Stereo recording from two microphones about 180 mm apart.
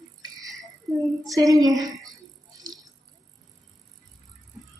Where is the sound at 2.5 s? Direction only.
20° right (ahead or behind).